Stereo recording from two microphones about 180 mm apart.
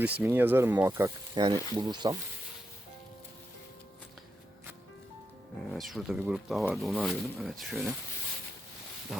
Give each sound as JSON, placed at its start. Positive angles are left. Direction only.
{"t": 0.0, "sound": "speech", "side_deg": -10}
{"t": 5.7, "sound": "speech", "side_deg": 0}